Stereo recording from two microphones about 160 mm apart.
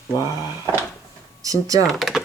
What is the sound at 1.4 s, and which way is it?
Speech, 20° right (ahead or behind).